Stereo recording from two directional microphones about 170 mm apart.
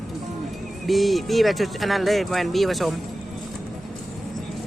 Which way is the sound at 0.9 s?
Centre (ahead or behind).